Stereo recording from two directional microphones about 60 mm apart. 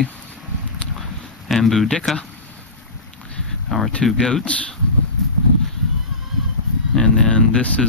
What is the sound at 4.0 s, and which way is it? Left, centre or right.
Speech, centre.